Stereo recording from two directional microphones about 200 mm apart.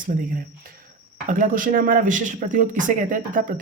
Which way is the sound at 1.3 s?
40° right (ahead or behind).